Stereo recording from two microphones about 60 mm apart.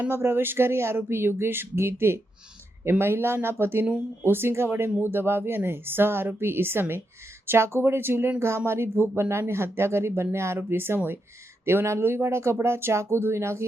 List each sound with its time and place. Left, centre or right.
0.1 s a woman's voice: right